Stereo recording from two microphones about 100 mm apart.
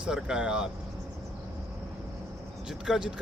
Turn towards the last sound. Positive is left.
turn(degrees=-5)  # may be behind; listen again after turning